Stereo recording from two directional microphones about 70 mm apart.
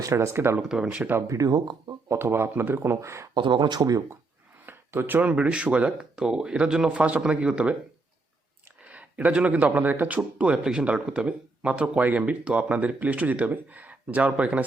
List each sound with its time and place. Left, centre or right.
0.0 s speech: right
0.7 s speech: centre
1.3 s speech: right
2.0 s speech: right
3.5 s speech: right
4.6 s a sound: right
5.3 s speech: centre
8.8 s speech: centre